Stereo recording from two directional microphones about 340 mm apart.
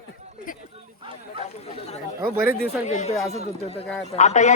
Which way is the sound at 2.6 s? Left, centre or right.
Left.